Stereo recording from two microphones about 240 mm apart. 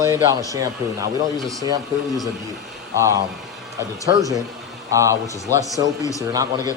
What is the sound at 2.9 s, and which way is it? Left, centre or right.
Speech, centre.